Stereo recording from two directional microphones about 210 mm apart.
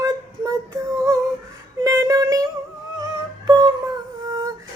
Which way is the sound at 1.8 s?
15° right (ahead or behind).